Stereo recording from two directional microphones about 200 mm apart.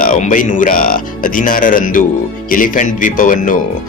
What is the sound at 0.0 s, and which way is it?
Speech, 40° left (ahead or behind).